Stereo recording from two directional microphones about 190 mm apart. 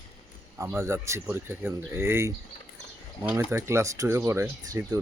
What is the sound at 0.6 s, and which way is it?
Speech, 15° right (ahead or behind).